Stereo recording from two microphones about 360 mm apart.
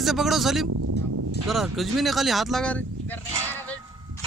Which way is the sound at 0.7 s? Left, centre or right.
Right.